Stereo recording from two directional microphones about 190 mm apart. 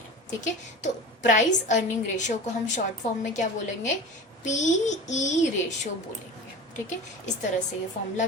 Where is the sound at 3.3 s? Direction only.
40° left (ahead or behind).